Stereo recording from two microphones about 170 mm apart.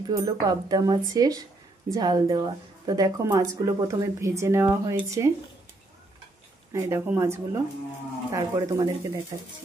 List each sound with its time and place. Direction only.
0.0 s speech: 20° right (ahead or behind)
6.7 s a woman's voice: 15° right (ahead or behind)